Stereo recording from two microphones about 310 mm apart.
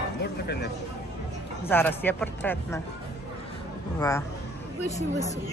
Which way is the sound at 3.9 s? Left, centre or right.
Centre.